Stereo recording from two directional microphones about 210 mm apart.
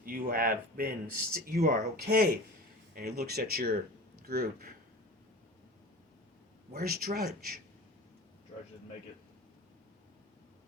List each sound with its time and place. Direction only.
0.0 s speech: 45° right (ahead or behind)
6.7 s speech: 45° right (ahead or behind)